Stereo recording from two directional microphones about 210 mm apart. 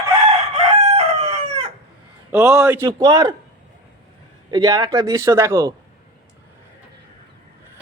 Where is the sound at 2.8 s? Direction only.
20° right (ahead or behind).